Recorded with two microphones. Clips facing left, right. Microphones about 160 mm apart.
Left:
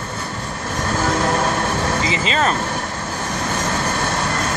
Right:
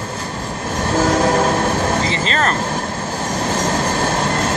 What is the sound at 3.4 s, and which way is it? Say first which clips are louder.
Train: right 4 dB; 35° right (ahead or behind).